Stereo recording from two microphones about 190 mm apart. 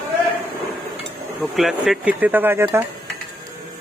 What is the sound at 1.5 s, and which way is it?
Speech, centre (ahead or behind).